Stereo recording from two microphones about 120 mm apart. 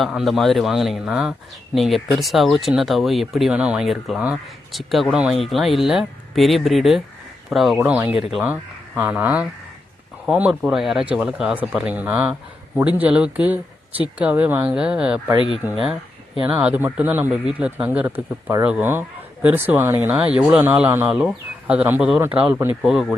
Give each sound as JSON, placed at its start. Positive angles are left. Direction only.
{"t": 0.0, "sound": "a man's voice", "side_deg": 0}
{"t": 7.8, "sound": "speech", "side_deg": -15}
{"t": 10.5, "sound": "a man's voice", "side_deg": 0}
{"t": 15.4, "sound": "speech", "side_deg": 45}
{"t": 16.6, "sound": "speech", "side_deg": -15}
{"t": 22.8, "sound": "a man's voice", "side_deg": -5}